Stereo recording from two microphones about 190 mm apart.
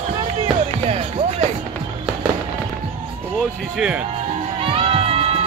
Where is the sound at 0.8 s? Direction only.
35° right (ahead or behind).